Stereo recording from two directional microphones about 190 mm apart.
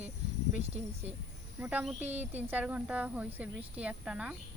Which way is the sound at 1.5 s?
5° right (ahead or behind).